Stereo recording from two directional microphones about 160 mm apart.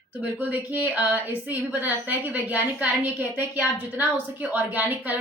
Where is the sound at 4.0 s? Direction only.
10° right (ahead or behind).